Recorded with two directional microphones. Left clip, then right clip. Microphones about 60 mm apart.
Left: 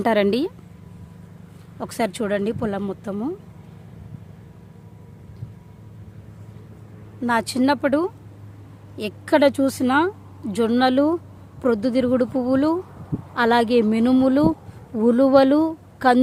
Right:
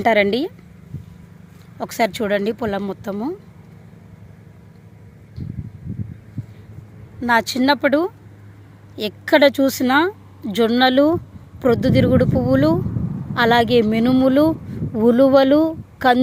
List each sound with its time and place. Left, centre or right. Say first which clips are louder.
0.0 s speech: right 3 dB; left
1.8 s speech: right 4 dB; centre
7.3 s speech: right 4 dB; centre
10.1 s a sound: right 3 dB; centre
10.7 s speech: right 4 dB; centre
15.4 s a woman's voice: right 2 dB; centre